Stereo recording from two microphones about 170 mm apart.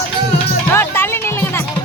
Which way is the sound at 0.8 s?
15° left (ahead or behind).